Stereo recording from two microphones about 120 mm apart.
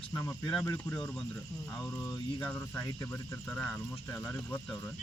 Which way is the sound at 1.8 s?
30° left (ahead or behind).